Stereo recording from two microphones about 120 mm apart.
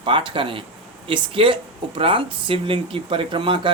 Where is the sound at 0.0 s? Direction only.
45° right (ahead or behind).